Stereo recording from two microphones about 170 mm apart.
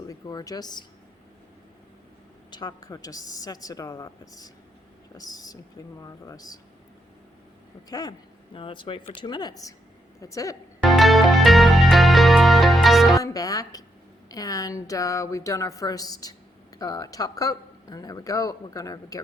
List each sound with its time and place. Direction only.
0.1 s speech: 20° left (ahead or behind)
2.5 s speech: 25° left (ahead or behind)
7.9 s speech: 20° left (ahead or behind)
10.8 s music: centre (ahead or behind)
13.1 s speech: 20° left (ahead or behind)